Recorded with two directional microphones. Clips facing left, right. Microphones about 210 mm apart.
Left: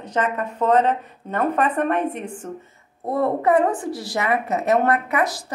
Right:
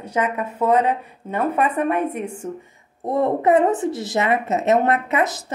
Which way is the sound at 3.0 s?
20° right (ahead or behind).